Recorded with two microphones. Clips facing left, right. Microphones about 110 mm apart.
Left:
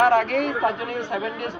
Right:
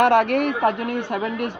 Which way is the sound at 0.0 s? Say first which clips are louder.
Right 2 dB; 65° right (ahead or behind).